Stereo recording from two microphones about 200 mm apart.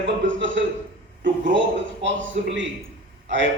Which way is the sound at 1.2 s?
65° right (ahead or behind).